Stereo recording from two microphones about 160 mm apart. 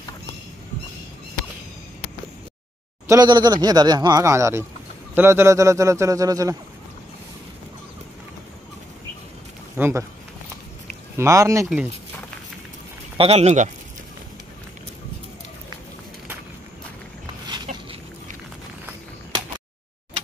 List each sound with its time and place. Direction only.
3.1 s speech: 25° right (ahead or behind)
9.8 s speech: 15° right (ahead or behind)
11.1 s speech: 20° right (ahead or behind)
13.2 s speech: 40° right (ahead or behind)
17.7 s a sound: 50° right (ahead or behind)